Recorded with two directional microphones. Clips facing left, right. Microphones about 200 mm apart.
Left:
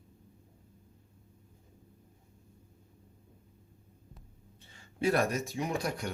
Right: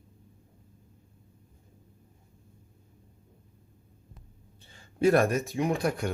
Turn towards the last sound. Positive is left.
turn(degrees=-55)  # may be behind; listen again after turning